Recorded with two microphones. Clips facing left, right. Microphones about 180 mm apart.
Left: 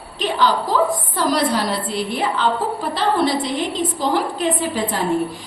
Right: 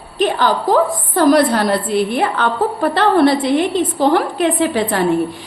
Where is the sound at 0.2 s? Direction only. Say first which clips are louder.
Right 3 dB; 50° right (ahead or behind).